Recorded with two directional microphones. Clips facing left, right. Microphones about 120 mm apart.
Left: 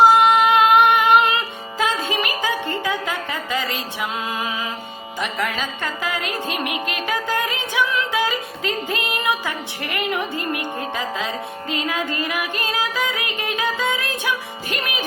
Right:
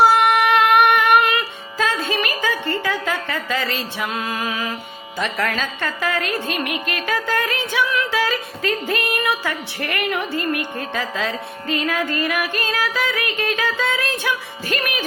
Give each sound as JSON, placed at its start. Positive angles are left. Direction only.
{"t": 0.0, "sound": "music", "side_deg": 20}
{"t": 5.2, "sound": "a woman's voice", "side_deg": 15}
{"t": 11.7, "sound": "music", "side_deg": 20}